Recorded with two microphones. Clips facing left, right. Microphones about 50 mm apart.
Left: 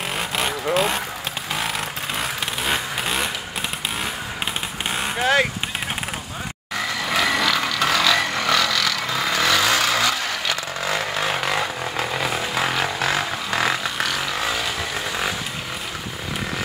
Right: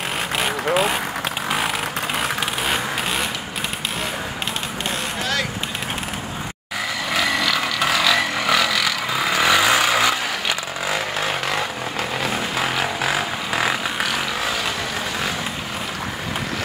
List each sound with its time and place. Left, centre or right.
0.7 s speech: centre
2.6 s vehicle: centre
5.2 s vehicle: left
7.1 s a sound: centre